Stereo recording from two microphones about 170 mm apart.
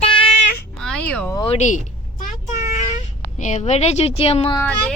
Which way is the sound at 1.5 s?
45° left (ahead or behind).